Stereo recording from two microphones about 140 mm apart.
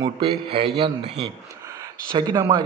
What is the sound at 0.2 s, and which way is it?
Speech, 40° right (ahead or behind).